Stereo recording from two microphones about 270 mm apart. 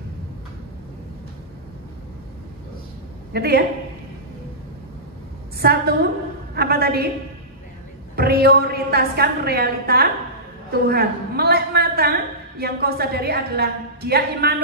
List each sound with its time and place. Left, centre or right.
3.3 s a woman's voice: right
5.6 s a woman's voice: right
6.5 s a sound: right
8.2 s a woman's voice: right